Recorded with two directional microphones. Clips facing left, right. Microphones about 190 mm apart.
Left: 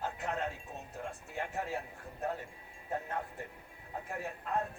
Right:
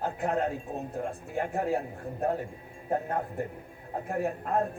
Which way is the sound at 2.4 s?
40° right (ahead or behind).